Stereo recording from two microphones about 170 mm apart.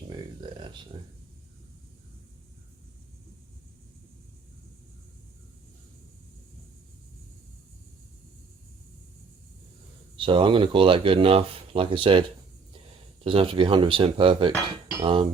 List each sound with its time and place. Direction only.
0.9 s speech: 30° right (ahead or behind)
10.2 s speech: 30° right (ahead or behind)
13.2 s speech: 30° right (ahead or behind)